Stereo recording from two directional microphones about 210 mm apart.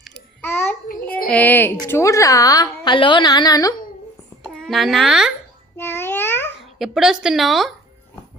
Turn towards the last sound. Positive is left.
turn(degrees=0)  # may be behind; listen again after turning